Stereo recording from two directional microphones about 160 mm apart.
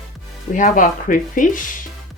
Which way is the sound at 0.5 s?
55° left (ahead or behind).